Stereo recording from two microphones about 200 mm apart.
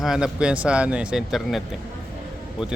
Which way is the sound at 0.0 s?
5° right (ahead or behind).